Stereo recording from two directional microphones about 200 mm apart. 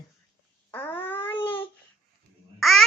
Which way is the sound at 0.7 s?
10° left (ahead or behind).